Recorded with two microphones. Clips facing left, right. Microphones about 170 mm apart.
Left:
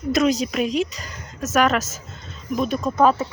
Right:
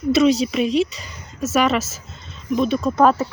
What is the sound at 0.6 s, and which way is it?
Speech, 40° left (ahead or behind).